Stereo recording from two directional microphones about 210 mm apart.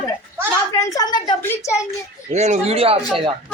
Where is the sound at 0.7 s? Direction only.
15° left (ahead or behind).